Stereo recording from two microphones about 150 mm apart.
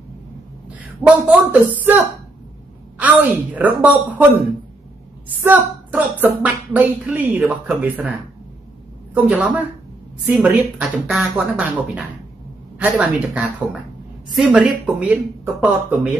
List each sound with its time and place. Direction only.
0.7 s a woman's voice: 10° right (ahead or behind)
5.4 s speech: 10° right (ahead or behind)
9.3 s speech: 10° right (ahead or behind)